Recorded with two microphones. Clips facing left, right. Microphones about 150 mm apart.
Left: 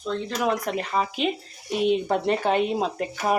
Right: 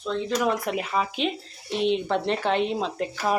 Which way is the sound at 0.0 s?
Centre (ahead or behind).